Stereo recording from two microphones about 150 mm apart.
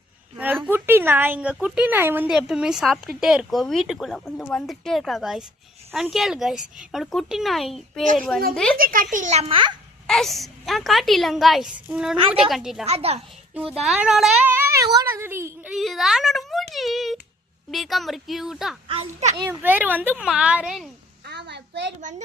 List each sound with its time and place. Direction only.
0.6 s a woman's voice: 15° right (ahead or behind)
8.0 s a child's voice: 55° right (ahead or behind)
8.8 s a child's voice: 70° right (ahead or behind); by 9.7 s 35° right (ahead or behind)
10.1 s a woman's voice: centre (ahead or behind)
12.8 s a child's voice: 45° right (ahead or behind)
13.6 s a woman's voice: centre (ahead or behind)
14.5 s a sound: 20° right (ahead or behind)
14.9 s a woman's voice: 15° right (ahead or behind)
15.7 s a woman's voice: centre (ahead or behind)
18.9 s a child's voice: 45° right (ahead or behind)
19.6 s a woman's voice: 10° right (ahead or behind)
22.0 s a child's voice: 55° right (ahead or behind)